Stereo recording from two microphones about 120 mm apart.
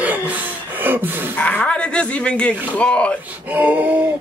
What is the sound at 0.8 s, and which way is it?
Gasp, 15° right (ahead or behind).